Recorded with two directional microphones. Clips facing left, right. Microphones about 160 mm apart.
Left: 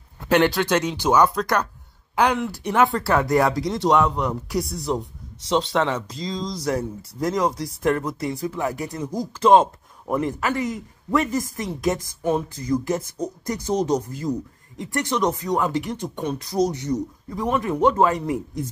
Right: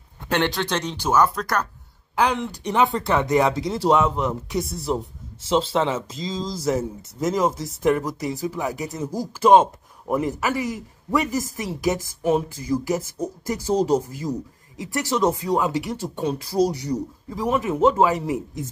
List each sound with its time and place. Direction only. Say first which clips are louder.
0.3 s speech: left 5 dB; 5° left (ahead or behind)
1.1 s speech: left 1 dB; 5° right (ahead or behind)
14.8 s speech: right 1 dB; 5° right (ahead or behind)
16.2 s speech: right 3 dB; 30° right (ahead or behind)
16.9 s speech: left 1 dB; 5° right (ahead or behind)